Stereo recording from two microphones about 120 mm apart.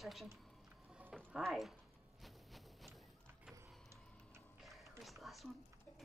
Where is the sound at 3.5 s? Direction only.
25° right (ahead or behind).